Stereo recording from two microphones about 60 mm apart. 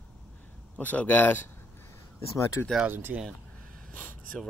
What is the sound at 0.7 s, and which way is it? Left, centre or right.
Speech, left.